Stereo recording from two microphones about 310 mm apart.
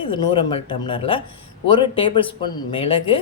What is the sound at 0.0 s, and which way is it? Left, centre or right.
Speech, centre.